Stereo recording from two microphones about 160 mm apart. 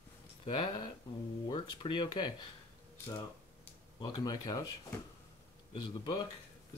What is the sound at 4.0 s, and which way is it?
Speech, 25° left (ahead or behind).